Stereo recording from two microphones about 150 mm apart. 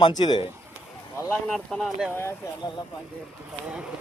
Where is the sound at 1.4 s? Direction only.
5° left (ahead or behind).